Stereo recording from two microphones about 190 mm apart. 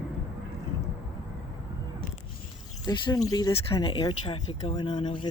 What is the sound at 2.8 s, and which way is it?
Speech, 20° left (ahead or behind).